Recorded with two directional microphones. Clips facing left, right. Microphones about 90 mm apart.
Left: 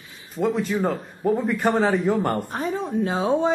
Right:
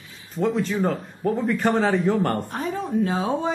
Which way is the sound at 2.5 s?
25° left (ahead or behind).